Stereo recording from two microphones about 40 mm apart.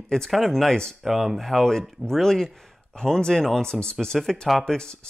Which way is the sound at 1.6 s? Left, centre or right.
Centre.